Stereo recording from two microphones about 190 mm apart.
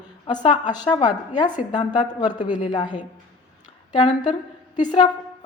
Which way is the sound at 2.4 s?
40° left (ahead or behind).